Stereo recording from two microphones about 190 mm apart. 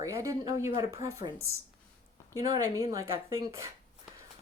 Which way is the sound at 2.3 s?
20° right (ahead or behind).